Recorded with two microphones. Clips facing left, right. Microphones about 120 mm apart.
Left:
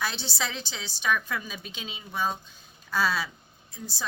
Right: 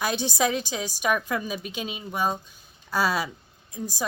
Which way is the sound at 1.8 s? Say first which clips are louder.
Right 8 dB; 55° right (ahead or behind).